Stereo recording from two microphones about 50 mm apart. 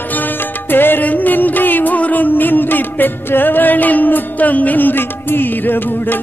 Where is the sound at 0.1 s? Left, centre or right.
Left.